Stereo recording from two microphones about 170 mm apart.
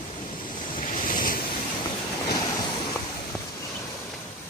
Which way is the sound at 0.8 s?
55° left (ahead or behind).